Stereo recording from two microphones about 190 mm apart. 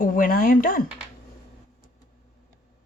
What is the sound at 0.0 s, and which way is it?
Speech, 45° left (ahead or behind).